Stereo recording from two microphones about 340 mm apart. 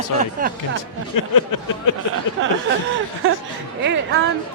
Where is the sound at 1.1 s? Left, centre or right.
Left.